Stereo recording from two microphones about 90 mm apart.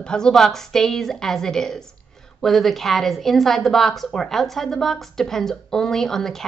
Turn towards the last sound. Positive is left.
turn(degrees=5)  # may be behind; listen again after turning